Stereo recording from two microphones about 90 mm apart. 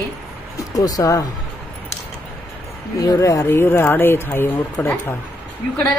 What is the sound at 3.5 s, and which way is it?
Speech, 25° left (ahead or behind).